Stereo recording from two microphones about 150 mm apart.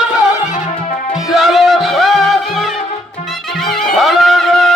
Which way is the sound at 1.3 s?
Centre (ahead or behind).